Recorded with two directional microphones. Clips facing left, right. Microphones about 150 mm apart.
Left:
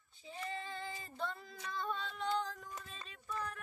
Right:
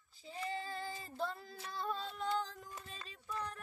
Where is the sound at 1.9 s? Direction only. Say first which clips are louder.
Even; 35° right (ahead or behind).